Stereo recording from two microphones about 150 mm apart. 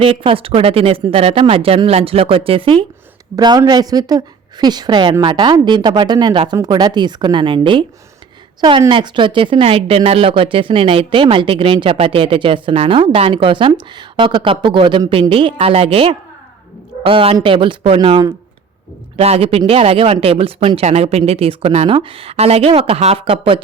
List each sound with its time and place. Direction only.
0.0 s speech: 35° right (ahead or behind)
3.3 s speech: 25° right (ahead or behind)